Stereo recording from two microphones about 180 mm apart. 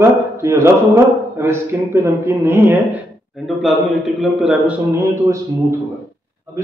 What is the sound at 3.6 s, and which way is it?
A man's voice, centre (ahead or behind).